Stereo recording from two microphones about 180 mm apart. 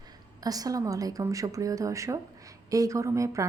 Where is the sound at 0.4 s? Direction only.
20° right (ahead or behind).